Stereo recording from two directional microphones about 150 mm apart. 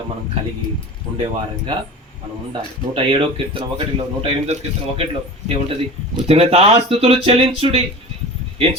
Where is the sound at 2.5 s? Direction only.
35° right (ahead or behind).